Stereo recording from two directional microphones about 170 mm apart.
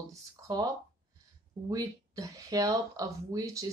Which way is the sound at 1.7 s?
20° right (ahead or behind).